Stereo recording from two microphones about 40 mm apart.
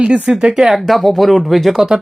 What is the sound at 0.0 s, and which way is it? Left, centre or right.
Speech, right.